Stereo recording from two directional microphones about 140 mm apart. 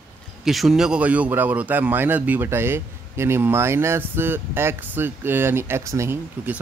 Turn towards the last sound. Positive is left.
turn(degrees=-15)  # may be behind; listen again after turning